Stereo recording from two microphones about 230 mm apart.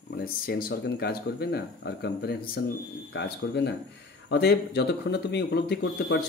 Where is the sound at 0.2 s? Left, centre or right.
Left.